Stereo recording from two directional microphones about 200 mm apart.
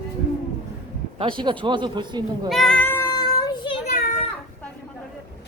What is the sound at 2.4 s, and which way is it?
Cat, centre (ahead or behind).